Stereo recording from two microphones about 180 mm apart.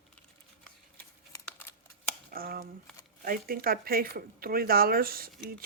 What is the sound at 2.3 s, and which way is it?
Speech, 55° right (ahead or behind).